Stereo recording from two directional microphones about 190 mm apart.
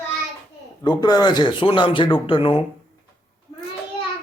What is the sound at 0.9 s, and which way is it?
Speech, 20° left (ahead or behind).